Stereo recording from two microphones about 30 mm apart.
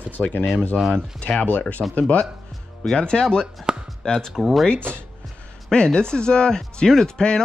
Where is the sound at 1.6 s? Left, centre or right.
Left.